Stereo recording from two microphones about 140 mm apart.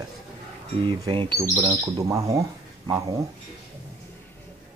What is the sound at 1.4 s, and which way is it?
Speech, 25° right (ahead or behind).